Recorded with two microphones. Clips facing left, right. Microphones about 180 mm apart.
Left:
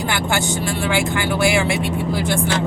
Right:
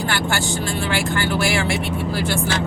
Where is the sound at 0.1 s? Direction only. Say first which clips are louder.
Left 2 dB; 20° left (ahead or behind).